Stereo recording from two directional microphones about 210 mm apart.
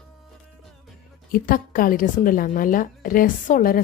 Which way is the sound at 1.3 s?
40° left (ahead or behind).